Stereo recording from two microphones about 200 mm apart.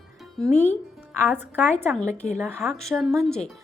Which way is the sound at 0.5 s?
35° left (ahead or behind).